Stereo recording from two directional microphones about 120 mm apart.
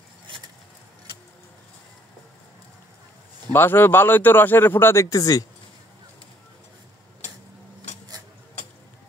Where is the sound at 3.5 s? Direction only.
20° left (ahead or behind).